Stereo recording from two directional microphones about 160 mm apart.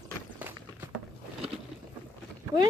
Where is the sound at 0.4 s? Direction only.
15° right (ahead or behind).